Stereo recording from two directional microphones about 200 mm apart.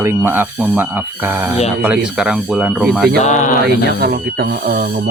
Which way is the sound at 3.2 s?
35° left (ahead or behind).